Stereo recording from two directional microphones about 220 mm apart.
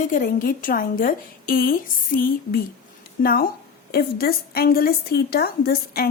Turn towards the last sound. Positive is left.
turn(degrees=45)  # may be behind; listen again after turning